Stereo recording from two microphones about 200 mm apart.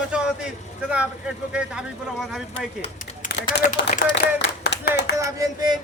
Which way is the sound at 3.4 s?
50° left (ahead or behind).